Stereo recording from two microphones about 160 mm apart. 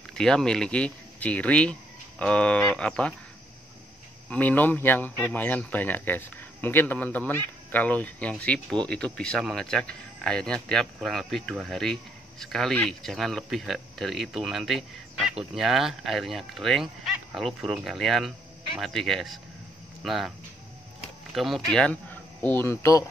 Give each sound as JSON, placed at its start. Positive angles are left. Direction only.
{"t": 0.1, "sound": "speech", "side_deg": 5}
{"t": 4.3, "sound": "speech", "side_deg": 10}